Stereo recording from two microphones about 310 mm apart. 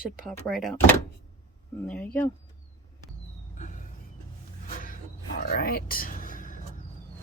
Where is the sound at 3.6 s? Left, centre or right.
Left.